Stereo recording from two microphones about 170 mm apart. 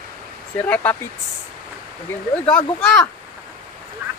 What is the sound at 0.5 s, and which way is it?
Speech, 10° left (ahead or behind).